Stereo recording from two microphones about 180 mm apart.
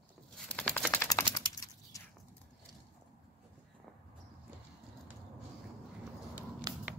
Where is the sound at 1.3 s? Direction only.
20° left (ahead or behind).